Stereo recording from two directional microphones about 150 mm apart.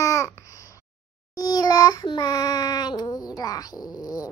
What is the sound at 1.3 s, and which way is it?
Child singing, 25° left (ahead or behind).